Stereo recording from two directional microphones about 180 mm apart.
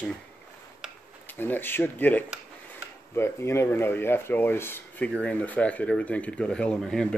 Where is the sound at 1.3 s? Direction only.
10° left (ahead or behind).